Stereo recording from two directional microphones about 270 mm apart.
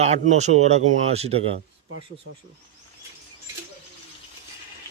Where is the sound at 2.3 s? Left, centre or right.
Right.